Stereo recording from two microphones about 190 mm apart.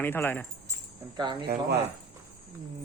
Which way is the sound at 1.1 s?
25° right (ahead or behind).